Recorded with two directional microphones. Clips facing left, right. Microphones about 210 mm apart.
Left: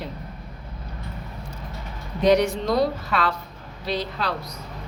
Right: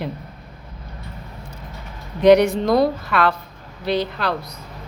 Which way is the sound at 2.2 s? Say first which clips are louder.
Right 6 dB; 60° right (ahead or behind).